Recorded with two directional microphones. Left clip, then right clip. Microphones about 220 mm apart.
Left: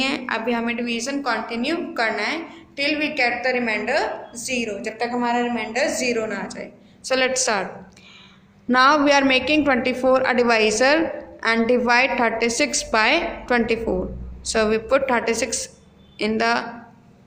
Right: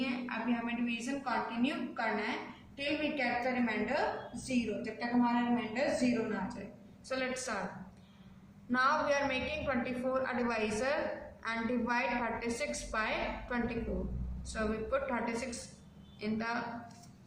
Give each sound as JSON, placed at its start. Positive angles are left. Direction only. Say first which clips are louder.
{"t": 0.0, "sound": "a woman's voice", "louder": "left 14 dB", "side_deg": 50}
{"t": 8.7, "sound": "a woman's voice", "louder": "left 15 dB", "side_deg": 40}